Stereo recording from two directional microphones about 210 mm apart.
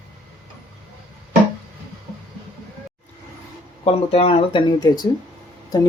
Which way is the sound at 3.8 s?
30° left (ahead or behind).